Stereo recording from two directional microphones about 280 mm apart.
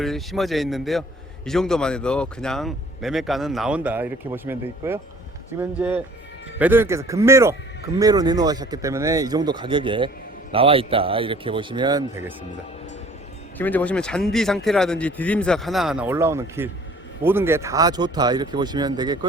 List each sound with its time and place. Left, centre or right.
0.0 s speech: centre
13.6 s speech: centre